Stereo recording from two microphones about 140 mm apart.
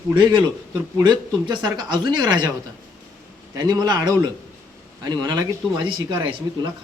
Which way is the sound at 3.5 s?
30° right (ahead or behind).